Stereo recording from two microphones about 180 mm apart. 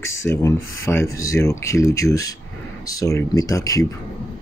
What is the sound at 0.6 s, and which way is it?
Speech, 90° left.